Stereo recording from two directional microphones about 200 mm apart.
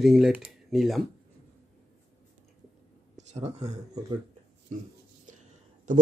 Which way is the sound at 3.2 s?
35° right (ahead or behind).